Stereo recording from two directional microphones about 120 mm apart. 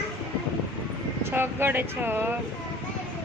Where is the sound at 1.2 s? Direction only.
20° right (ahead or behind).